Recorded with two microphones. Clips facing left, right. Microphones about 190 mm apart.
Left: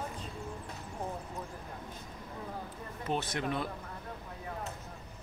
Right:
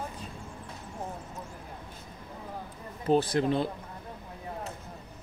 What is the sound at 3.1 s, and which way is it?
Speech, 35° right (ahead or behind).